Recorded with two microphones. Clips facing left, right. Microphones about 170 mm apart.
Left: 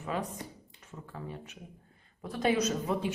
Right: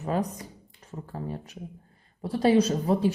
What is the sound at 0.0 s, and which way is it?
A woman's voice, 40° right (ahead or behind).